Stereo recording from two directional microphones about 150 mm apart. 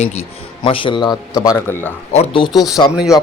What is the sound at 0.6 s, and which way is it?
A man's voice, 35° left (ahead or behind).